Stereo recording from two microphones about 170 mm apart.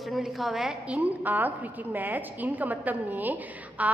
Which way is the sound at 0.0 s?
Centre (ahead or behind).